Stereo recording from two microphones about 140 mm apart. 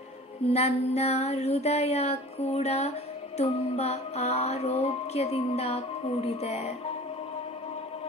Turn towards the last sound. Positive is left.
turn(degrees=50)  # may be behind; listen again after turning